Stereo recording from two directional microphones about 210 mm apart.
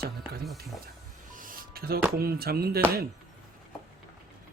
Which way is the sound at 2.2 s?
45° right (ahead or behind).